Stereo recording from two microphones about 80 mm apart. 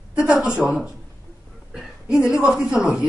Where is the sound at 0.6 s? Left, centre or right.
Centre.